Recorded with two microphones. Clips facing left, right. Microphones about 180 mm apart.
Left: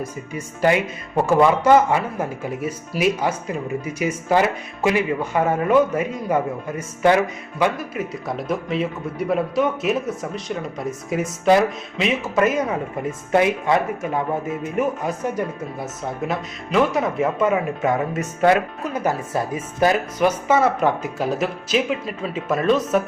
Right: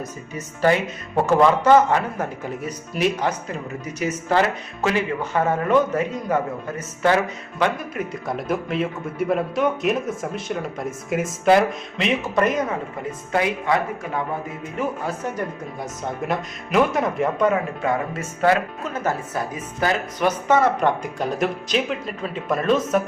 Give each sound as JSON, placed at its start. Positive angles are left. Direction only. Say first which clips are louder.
{"t": 0.3, "sound": "speech", "louder": "left 1 dB", "side_deg": 10}
{"t": 7.6, "sound": "a man's voice", "louder": "left 1 dB", "side_deg": 0}
{"t": 13.3, "sound": "speech", "louder": "left 3 dB", "side_deg": 25}
{"t": 15.0, "sound": "speech", "louder": "left 3 dB", "side_deg": 10}
{"t": 16.2, "sound": "a man's voice", "louder": "even", "side_deg": 0}
{"t": 19.3, "sound": "speech", "louder": "left 3 dB", "side_deg": 25}
{"t": 20.1, "sound": "a man's voice", "louder": "left 1 dB", "side_deg": 10}